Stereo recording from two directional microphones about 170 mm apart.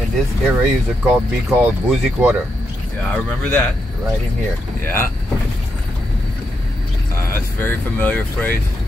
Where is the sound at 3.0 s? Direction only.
5° left (ahead or behind).